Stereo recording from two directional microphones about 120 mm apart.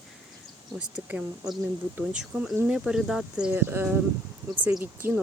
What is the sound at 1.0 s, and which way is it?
Speech, 15° right (ahead or behind).